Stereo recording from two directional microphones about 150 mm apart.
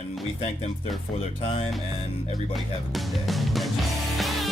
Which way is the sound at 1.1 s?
40° left (ahead or behind).